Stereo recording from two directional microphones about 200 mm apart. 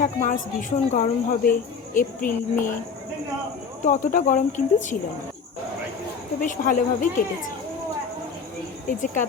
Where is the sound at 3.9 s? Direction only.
40° left (ahead or behind).